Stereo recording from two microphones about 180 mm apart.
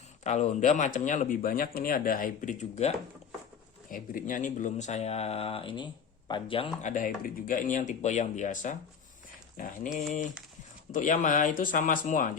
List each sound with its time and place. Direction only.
0.3 s speech: 40° left (ahead or behind)
6.8 s speech: 50° left (ahead or behind)